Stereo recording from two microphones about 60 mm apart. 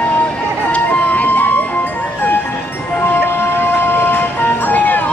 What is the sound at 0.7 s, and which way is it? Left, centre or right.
Music, left.